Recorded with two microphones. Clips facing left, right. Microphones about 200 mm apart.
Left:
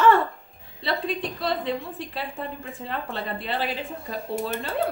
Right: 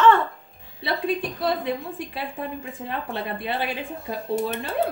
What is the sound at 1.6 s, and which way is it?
A woman's voice, 15° right (ahead or behind).